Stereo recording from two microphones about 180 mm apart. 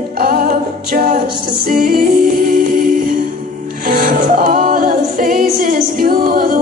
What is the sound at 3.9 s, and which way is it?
Music, 50° right (ahead or behind).